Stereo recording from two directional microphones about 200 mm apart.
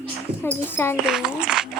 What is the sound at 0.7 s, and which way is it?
Speech, 10° left (ahead or behind).